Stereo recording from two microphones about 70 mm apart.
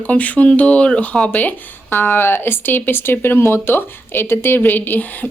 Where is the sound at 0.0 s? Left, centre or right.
Left.